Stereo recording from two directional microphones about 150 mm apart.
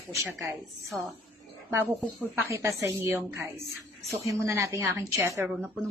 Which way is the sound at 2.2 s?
15° right (ahead or behind).